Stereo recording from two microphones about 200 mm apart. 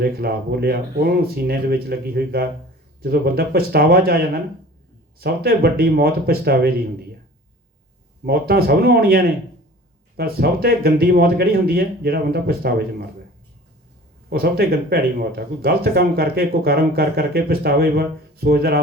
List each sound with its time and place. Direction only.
0.0 s speech: 50° right (ahead or behind)
5.2 s speech: 50° right (ahead or behind)
8.2 s speech: 50° right (ahead or behind)
14.3 s speech: 50° right (ahead or behind)